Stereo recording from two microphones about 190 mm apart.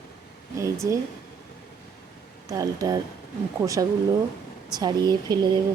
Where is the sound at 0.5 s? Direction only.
15° right (ahead or behind).